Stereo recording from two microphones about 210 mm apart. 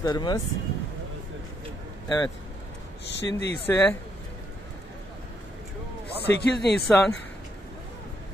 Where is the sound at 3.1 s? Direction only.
55° left (ahead or behind).